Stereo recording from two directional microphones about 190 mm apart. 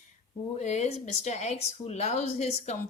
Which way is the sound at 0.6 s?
35° left (ahead or behind).